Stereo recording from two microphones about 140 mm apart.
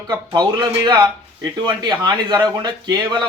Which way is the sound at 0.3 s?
30° right (ahead or behind).